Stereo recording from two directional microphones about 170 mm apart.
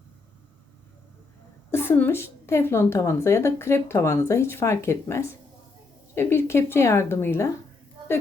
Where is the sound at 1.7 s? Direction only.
15° left (ahead or behind).